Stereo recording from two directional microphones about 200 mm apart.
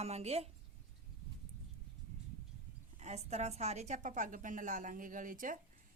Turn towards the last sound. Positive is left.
turn(degrees=-40)  # may be behind; listen again after turning